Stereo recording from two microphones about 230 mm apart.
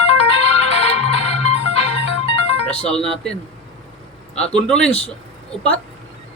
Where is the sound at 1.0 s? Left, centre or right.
Left.